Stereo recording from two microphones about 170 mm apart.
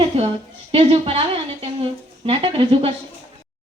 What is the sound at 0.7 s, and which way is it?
A woman's voice, 35° right (ahead or behind).